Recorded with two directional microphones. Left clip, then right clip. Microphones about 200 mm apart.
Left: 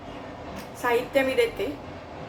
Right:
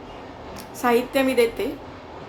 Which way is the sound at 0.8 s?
30° right (ahead or behind).